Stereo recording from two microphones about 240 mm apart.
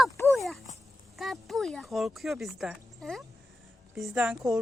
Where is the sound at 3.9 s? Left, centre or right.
Centre.